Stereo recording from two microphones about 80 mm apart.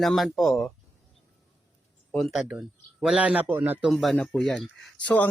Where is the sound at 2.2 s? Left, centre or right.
Centre; by 3.8 s right.